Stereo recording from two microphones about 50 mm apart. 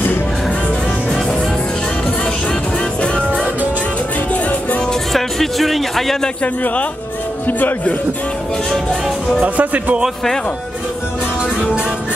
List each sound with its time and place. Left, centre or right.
4.3 s music: left
5.1 s speech: centre
6.4 s speech: left
9.4 s speech: right